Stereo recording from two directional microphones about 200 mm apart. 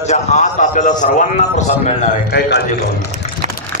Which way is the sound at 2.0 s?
50° left (ahead or behind).